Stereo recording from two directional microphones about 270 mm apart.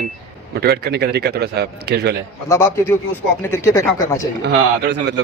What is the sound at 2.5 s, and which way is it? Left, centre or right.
Speech, centre.